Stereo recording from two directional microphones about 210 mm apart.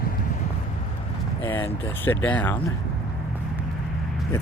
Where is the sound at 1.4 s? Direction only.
10° left (ahead or behind).